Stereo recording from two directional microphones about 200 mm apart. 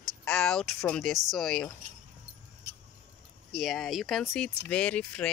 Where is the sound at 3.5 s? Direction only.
Centre (ahead or behind).